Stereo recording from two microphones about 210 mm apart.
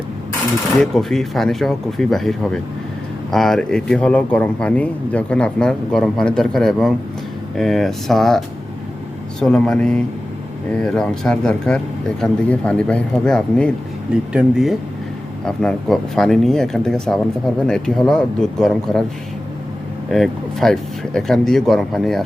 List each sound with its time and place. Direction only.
0.8 s speech: centre (ahead or behind)
9.4 s speech: 5° left (ahead or behind)
20.1 s speech: centre (ahead or behind)